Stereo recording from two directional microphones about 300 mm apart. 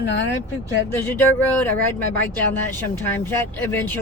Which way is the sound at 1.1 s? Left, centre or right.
Centre.